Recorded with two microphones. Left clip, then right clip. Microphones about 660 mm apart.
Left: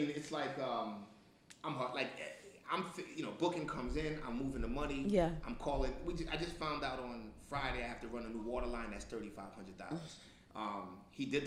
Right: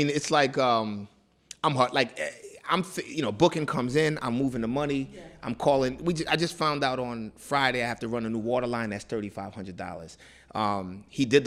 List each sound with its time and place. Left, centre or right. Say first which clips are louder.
0.1 s speech: right 17 dB; right
1.6 s a man's voice: right 16 dB; right